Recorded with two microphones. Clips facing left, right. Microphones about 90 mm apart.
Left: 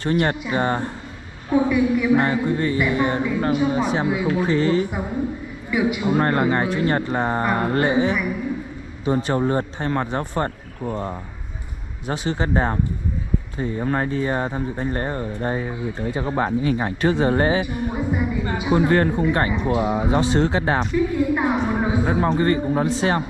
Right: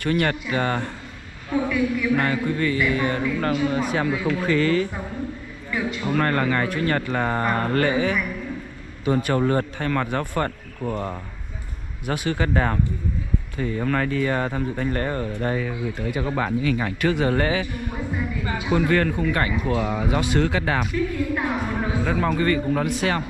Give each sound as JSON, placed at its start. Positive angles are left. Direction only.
{"t": 0.1, "sound": "speech", "side_deg": 20}
{"t": 7.4, "sound": "speech", "side_deg": 10}
{"t": 9.3, "sound": "speech", "side_deg": 20}
{"t": 12.3, "sound": "speech", "side_deg": 20}
{"t": 17.6, "sound": "speech", "side_deg": 20}